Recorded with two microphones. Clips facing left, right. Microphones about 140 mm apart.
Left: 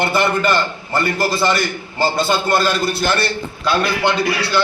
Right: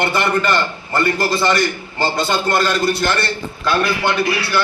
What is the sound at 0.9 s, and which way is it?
A man's voice, centre (ahead or behind).